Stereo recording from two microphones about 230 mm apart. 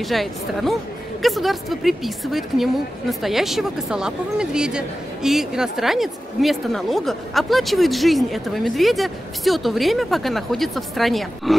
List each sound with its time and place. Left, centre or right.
0.0 s a woman's voice: centre